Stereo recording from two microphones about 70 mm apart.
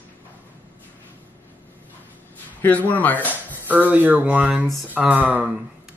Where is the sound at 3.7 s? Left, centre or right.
Right.